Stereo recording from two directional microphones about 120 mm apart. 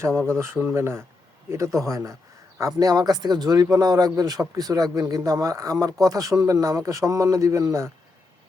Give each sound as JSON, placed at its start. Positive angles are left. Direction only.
{"t": 0.1, "sound": "speech", "side_deg": 5}
{"t": 0.3, "sound": "speech", "side_deg": -20}